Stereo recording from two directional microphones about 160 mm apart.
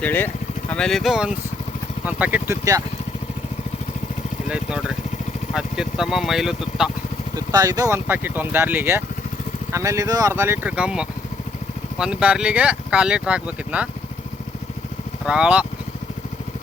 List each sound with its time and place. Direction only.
0.0 s speech: 10° left (ahead or behind); by 2.8 s 20° right (ahead or behind)
4.4 s speech: 5° right (ahead or behind)
7.3 s speech: 25° right (ahead or behind); by 13.8 s 10° right (ahead or behind)
15.3 s speech: 5° right (ahead or behind)